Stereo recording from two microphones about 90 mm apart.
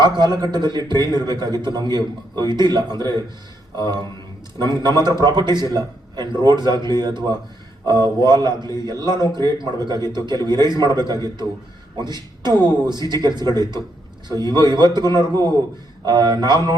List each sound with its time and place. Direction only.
0.0 s a man's voice: 55° right (ahead or behind)
4.5 s a man's voice: 50° right (ahead or behind)